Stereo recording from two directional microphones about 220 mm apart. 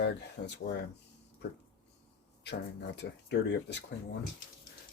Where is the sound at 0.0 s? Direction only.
50° left (ahead or behind).